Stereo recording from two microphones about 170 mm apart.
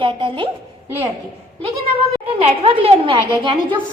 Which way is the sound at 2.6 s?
35° right (ahead or behind).